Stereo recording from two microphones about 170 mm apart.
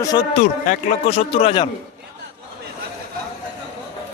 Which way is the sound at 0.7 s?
40° left (ahead or behind).